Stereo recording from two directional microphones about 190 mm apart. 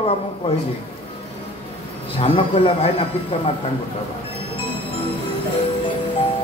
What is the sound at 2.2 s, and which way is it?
Speech, 30° left (ahead or behind).